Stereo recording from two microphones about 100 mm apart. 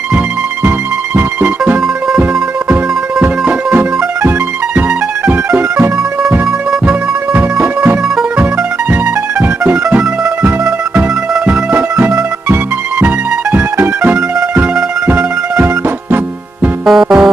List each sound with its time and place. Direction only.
0.7 s music: 15° right (ahead or behind)
6.9 s music: 15° right (ahead or behind)
9.7 s music: 10° right (ahead or behind)
16.8 s music: 5° right (ahead or behind)